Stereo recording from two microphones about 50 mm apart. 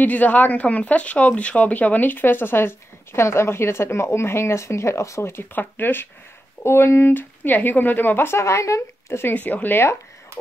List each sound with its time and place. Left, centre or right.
0.0 s speech: left
5.5 s speech: left
6.6 s speech: left
7.2 s speech: left
8.3 s speech: left
9.3 s speech: left